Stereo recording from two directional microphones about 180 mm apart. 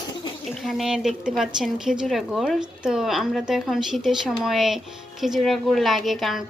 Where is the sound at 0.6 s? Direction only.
Centre (ahead or behind).